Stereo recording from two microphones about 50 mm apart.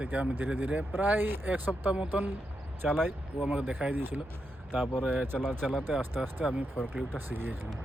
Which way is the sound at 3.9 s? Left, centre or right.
Right.